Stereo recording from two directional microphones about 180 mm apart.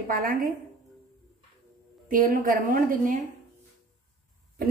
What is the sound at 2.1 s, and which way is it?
A woman's voice, 50° right (ahead or behind).